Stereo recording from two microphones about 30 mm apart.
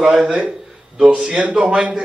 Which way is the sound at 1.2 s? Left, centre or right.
Right.